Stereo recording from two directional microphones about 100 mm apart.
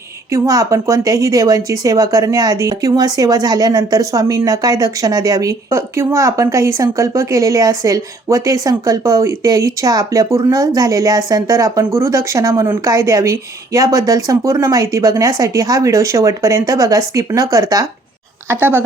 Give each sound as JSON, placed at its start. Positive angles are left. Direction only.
{"t": 0.3, "sound": "speech", "side_deg": -35}
{"t": 18.4, "sound": "a woman's voice", "side_deg": -20}